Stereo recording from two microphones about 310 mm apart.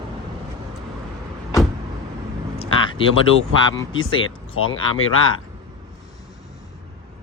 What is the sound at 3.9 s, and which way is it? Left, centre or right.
Speech, left.